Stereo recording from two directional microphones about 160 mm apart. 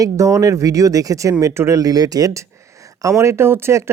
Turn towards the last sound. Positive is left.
turn(degrees=-15)  # may be behind; listen again after turning